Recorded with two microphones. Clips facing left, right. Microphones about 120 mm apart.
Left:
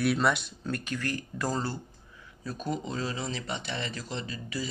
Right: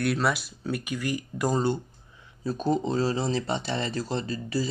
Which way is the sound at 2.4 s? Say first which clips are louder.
Right 8 dB; 30° right (ahead or behind).